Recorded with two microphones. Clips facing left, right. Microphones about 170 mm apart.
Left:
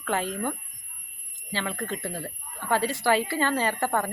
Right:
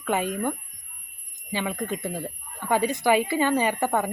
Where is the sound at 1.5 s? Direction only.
15° right (ahead or behind).